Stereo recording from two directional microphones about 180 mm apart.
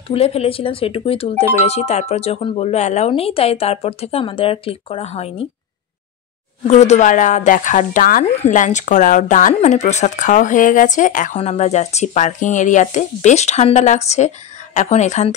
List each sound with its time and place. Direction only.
0.1 s speech: 35° left (ahead or behind)
6.7 s speech: 40° left (ahead or behind)